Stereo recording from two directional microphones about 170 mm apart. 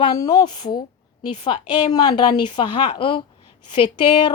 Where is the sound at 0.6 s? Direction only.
55° left (ahead or behind).